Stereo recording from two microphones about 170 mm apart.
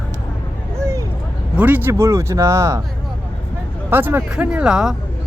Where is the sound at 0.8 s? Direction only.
15° right (ahead or behind).